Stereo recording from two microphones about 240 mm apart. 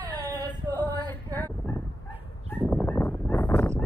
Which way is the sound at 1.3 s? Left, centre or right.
Centre.